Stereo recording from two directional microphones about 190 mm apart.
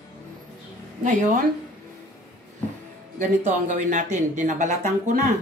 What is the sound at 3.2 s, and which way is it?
Speech, 40° right (ahead or behind).